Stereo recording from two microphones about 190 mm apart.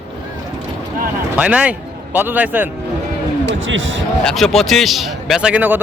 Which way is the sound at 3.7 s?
80° right.